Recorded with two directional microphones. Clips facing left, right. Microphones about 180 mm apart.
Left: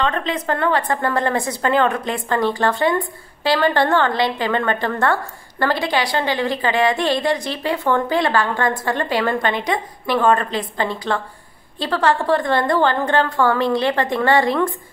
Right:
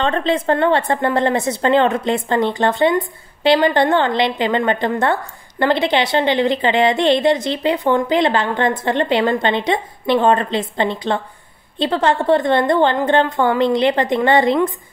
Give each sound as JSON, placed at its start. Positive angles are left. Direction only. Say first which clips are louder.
{"t": 0.0, "sound": "a woman's voice", "louder": "right 4 dB", "side_deg": -30}